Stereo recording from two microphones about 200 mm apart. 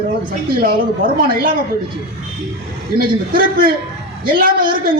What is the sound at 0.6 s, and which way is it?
Speech, 45° right (ahead or behind).